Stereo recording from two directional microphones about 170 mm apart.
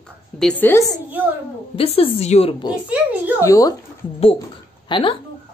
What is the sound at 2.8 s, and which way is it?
Speech, 10° right (ahead or behind).